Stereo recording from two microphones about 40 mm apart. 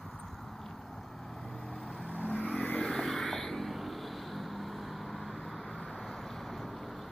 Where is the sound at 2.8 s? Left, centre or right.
Centre.